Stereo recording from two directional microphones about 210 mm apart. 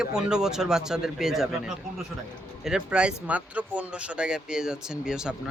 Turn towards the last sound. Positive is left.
turn(degrees=-5)  # may be behind; listen again after turning